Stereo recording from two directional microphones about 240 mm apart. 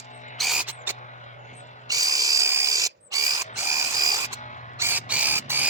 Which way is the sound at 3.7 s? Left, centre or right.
Centre.